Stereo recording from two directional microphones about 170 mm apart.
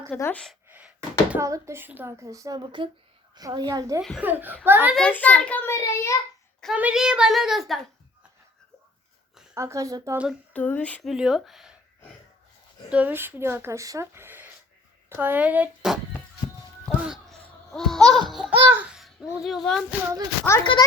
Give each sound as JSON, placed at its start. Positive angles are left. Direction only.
{"t": 0.1, "sound": "a child's voice", "side_deg": 10}
{"t": 0.7, "sound": "a sound", "side_deg": -10}
{"t": 1.5, "sound": "a woman's voice", "side_deg": -15}
{"t": 4.9, "sound": "a child's voice", "side_deg": 10}
{"t": 6.6, "sound": "a woman's voice", "side_deg": -5}
{"t": 9.6, "sound": "speech", "side_deg": -20}
{"t": 10.5, "sound": "a woman's voice", "side_deg": 10}
{"t": 12.9, "sound": "speech", "side_deg": -10}
{"t": 16.8, "sound": "a sound", "side_deg": 0}
{"t": 18.1, "sound": "a woman's voice", "side_deg": 0}
{"t": 20.5, "sound": "a child's voice", "side_deg": 15}